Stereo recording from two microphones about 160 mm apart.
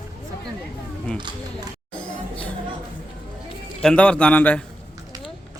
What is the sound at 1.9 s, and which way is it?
Music, 10° left (ahead or behind).